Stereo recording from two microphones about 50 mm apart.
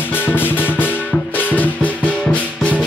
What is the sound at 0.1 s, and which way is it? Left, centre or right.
Music, left.